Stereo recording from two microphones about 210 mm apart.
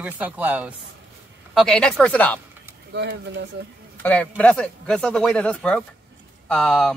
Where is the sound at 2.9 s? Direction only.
55° right (ahead or behind).